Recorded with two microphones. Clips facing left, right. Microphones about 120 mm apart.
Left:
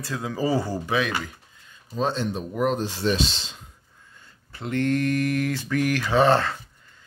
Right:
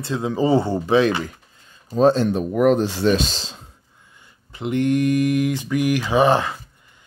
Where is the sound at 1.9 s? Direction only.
45° right (ahead or behind).